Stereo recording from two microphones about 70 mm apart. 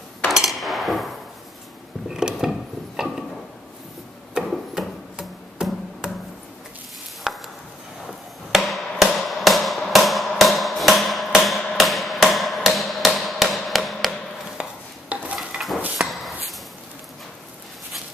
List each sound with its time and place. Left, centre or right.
0.3 s hammer: centre
2.0 s mechanisms: centre
4.5 s music: centre
7.3 s chop: centre
8.5 s music: centre
14.6 s a sound: centre
15.3 s dishes: centre
16.0 s a sound: centre